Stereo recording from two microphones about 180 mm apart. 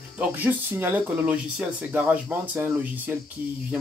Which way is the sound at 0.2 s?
10° right (ahead or behind).